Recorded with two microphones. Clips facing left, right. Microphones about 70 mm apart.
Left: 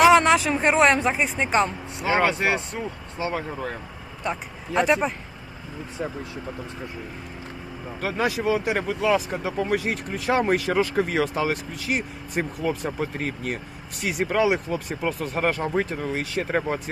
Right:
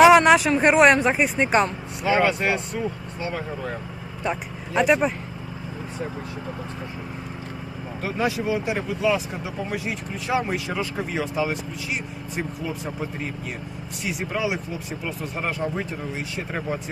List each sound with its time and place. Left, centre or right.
0.0 s a sound: centre
0.6 s speech: centre
2.0 s speech: left
4.7 s speech: centre
8.0 s speech: left
9.7 s speech: left
15.8 s speech: left